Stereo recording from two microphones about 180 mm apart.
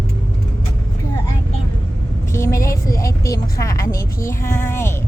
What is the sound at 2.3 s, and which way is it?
A woman's voice, 15° left (ahead or behind).